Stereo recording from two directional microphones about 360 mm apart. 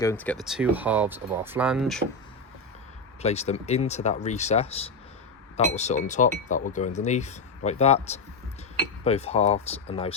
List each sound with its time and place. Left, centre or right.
0.0 s speech: centre
3.2 s speech: centre